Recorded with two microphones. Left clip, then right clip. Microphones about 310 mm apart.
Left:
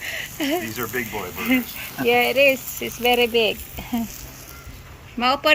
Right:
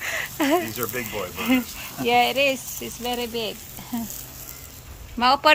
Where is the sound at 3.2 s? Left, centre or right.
Centre.